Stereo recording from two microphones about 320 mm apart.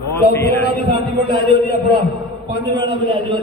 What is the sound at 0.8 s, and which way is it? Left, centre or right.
Speech, centre.